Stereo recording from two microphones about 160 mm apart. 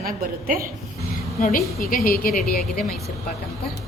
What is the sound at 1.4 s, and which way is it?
Speech, 65° left (ahead or behind).